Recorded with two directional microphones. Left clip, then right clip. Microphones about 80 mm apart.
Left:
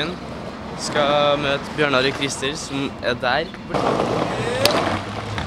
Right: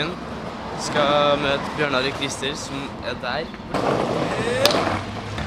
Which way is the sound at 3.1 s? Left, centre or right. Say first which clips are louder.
Left 6 dB; left.